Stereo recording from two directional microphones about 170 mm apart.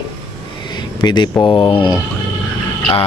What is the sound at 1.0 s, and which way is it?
Speech, 25° left (ahead or behind).